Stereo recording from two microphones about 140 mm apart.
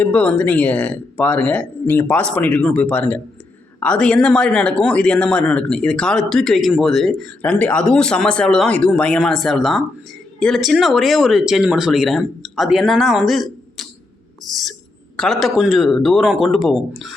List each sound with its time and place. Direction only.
0.0 s speech: 10° left (ahead or behind)